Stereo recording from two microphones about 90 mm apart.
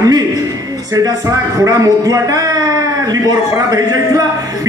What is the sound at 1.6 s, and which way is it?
A man's voice, 40° right (ahead or behind).